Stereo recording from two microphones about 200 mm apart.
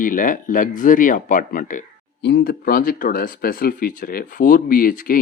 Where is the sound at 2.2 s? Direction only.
55° left (ahead or behind).